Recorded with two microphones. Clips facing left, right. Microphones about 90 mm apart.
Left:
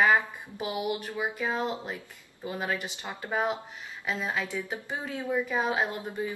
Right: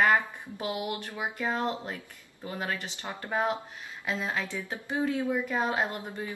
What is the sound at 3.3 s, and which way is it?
Speech, 5° left (ahead or behind).